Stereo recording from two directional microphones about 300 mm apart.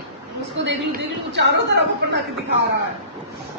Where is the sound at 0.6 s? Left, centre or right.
Right.